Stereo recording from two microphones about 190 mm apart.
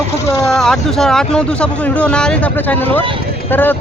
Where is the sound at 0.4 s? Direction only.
Centre (ahead or behind).